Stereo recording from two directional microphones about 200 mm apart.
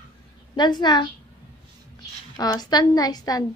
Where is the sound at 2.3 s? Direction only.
20° left (ahead or behind).